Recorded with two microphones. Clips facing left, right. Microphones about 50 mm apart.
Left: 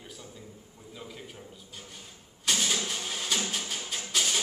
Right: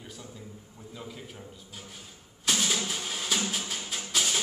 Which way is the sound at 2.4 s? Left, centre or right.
Centre.